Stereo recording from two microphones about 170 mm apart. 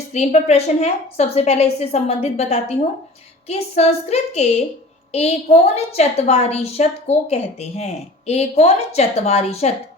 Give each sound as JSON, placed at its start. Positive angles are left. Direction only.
{"t": 0.1, "sound": "a woman's voice", "side_deg": 40}